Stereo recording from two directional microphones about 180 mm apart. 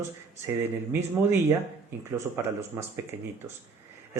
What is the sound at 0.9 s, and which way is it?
A man's voice, 10° right (ahead or behind).